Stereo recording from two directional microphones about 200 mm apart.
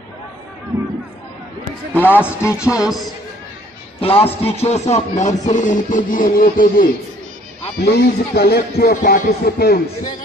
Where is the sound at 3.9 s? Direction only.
30° left (ahead or behind).